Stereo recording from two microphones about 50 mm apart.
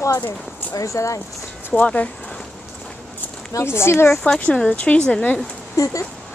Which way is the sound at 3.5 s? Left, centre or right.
Left.